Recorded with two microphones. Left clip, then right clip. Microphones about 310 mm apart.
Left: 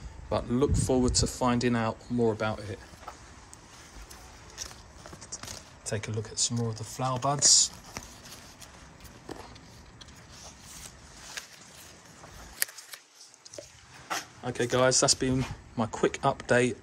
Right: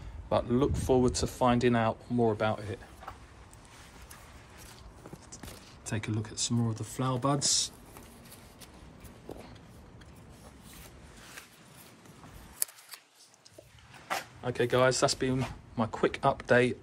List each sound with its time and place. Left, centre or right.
0.3 s speech: centre
5.9 s speech: centre
14.0 s speech: centre